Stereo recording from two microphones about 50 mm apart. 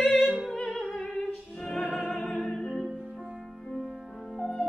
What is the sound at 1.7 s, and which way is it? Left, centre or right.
Music, centre.